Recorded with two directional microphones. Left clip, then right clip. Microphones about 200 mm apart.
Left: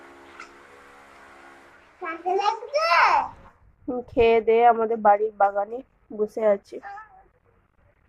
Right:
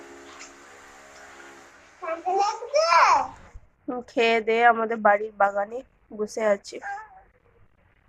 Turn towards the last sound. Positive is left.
turn(degrees=10)  # may be behind; listen again after turning